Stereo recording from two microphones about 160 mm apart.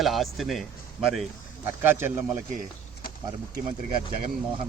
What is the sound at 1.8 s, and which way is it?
Speech, 15° right (ahead or behind).